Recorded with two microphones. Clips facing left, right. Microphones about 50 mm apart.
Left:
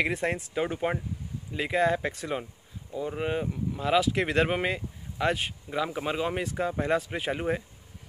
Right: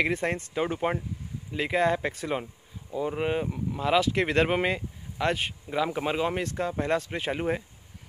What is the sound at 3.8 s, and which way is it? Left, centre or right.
Speech, centre.